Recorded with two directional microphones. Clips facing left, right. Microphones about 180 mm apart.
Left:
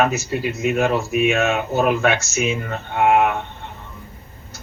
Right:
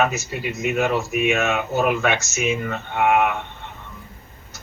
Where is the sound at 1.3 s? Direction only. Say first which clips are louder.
Left 2 dB; 35° left (ahead or behind).